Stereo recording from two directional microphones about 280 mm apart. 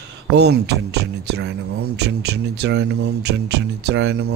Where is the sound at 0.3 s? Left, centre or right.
Right.